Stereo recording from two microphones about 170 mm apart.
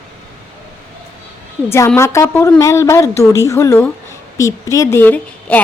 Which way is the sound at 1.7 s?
15° left (ahead or behind).